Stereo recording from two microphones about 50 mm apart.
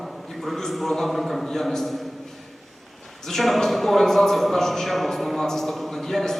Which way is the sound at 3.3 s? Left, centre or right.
Centre.